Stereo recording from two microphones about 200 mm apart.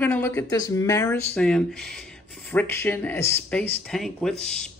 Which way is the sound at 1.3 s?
5° left (ahead or behind).